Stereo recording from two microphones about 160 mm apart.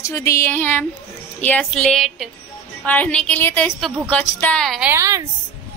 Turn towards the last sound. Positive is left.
turn(degrees=-15)  # may be behind; listen again after turning